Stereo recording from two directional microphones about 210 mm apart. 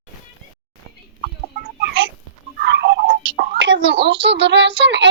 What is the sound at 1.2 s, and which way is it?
Chicken, 40° right (ahead or behind).